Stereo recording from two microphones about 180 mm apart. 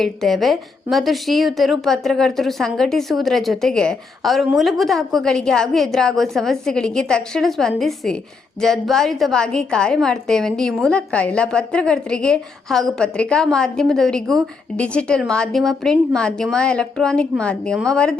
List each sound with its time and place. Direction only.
0.0 s a woman's voice: centre (ahead or behind)